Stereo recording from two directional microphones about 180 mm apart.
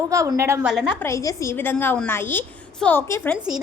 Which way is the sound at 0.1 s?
15° right (ahead or behind).